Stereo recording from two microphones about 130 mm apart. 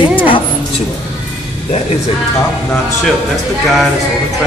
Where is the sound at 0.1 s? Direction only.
40° left (ahead or behind).